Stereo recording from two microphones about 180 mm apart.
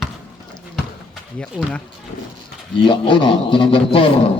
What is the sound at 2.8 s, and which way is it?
A man's voice, 25° left (ahead or behind).